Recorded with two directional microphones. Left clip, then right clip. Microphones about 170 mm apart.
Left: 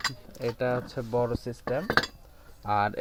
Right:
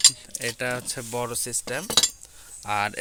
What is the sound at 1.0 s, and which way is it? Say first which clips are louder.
Speech: left 2 dB; 15° right (ahead or behind).